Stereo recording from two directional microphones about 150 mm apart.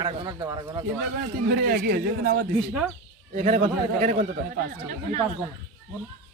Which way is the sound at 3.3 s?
55° right (ahead or behind).